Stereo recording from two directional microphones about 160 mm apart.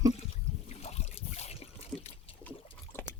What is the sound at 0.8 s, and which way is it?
Trickle, 40° left (ahead or behind).